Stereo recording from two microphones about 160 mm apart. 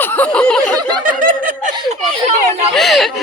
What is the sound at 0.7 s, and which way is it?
Snicker, 25° right (ahead or behind).